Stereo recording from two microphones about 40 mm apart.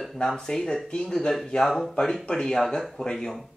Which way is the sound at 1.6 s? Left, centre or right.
Centre.